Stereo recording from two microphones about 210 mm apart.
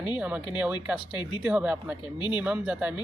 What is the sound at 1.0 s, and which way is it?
Speech, 20° left (ahead or behind).